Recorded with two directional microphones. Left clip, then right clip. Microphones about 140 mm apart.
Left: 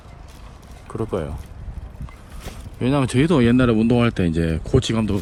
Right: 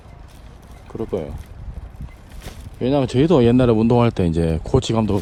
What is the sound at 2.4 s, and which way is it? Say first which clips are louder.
Speech: right 2 dB; centre (ahead or behind).